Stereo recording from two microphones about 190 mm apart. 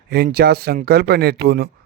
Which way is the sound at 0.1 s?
55° right (ahead or behind).